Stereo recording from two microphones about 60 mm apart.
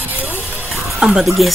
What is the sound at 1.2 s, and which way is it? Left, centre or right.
Speech, centre.